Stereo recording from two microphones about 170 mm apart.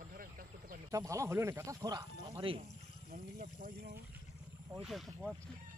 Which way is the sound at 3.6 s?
55° right (ahead or behind).